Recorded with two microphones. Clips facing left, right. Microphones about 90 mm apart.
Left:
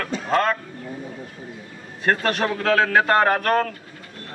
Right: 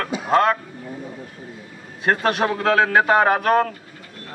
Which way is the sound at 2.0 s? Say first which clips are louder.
Right 2 dB; 5° right (ahead or behind).